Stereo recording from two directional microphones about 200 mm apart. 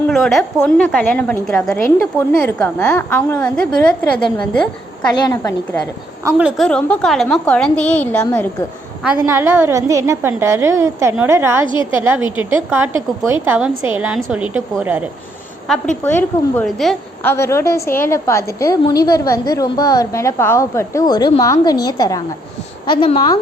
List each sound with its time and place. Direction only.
0.1 s a woman's voice: centre (ahead or behind)
5.1 s a woman's voice: 15° left (ahead or behind)
6.2 s a woman's voice: 5° right (ahead or behind)
6.7 s a woman's voice: 5° left (ahead or behind)
9.2 s a woman's voice: 15° right (ahead or behind)
11.6 s a woman's voice: 25° left (ahead or behind)
11.9 s a woman's voice: 10° right (ahead or behind)
16.0 s a woman's voice: 10° left (ahead or behind)
17.3 s a woman's voice: 15° left (ahead or behind)